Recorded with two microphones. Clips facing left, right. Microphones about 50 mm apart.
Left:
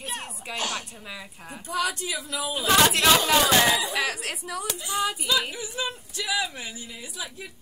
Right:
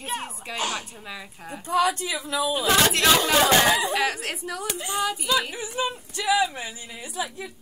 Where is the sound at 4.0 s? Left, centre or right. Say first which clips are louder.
Right 2 dB; centre.